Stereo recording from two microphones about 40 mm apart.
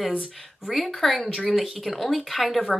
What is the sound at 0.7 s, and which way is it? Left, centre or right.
Speech, centre.